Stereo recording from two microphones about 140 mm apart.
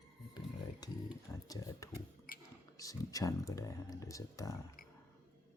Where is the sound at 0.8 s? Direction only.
30° left (ahead or behind).